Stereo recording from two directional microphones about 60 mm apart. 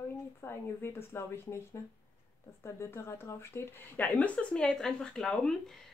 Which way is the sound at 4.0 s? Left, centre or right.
Left.